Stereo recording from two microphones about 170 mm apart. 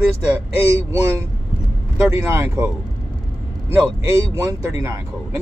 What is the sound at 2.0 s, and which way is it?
Speech, 15° right (ahead or behind).